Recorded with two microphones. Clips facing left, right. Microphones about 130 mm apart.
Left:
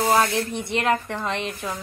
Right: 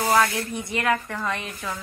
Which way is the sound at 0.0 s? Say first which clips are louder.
Left 1 dB; 25° left (ahead or behind).